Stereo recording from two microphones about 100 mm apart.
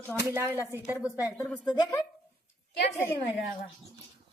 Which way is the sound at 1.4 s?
5° left (ahead or behind).